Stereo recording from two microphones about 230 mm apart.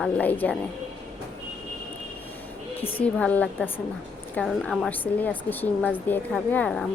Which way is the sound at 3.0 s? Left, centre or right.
Centre.